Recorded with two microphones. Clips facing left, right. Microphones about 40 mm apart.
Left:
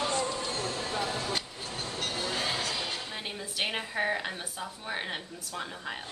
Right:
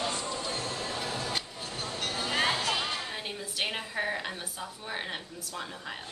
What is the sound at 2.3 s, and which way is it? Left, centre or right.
Music, right.